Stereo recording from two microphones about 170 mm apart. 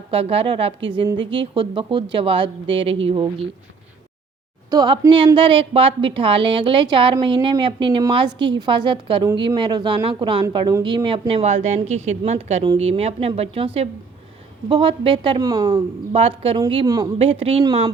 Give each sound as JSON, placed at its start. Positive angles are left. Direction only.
{"t": 0.1, "sound": "a woman's voice", "side_deg": -35}
{"t": 4.7, "sound": "a woman's voice", "side_deg": -25}
{"t": 14.7, "sound": "a woman's voice", "side_deg": -30}
{"t": 16.1, "sound": "speech", "side_deg": -35}
{"t": 17.2, "sound": "speech", "side_deg": -35}